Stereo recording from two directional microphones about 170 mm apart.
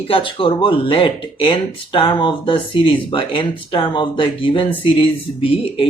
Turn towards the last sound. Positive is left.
turn(degrees=30)  # may be behind; listen again after turning